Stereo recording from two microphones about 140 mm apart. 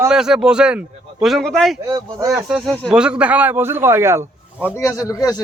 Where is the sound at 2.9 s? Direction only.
5° right (ahead or behind).